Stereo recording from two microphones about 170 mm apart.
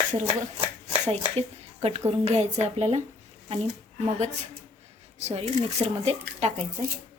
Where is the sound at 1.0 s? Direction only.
40° right (ahead or behind).